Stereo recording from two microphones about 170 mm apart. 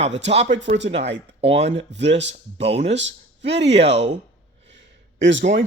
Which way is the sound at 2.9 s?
90° right.